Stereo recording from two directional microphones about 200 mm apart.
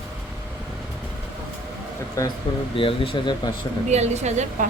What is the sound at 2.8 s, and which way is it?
Speech, 25° left (ahead or behind).